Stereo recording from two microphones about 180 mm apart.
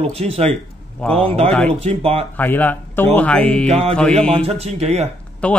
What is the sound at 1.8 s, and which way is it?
Speech, 35° right (ahead or behind).